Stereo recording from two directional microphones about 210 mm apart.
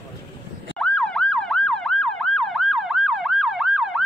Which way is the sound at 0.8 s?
5° left (ahead or behind).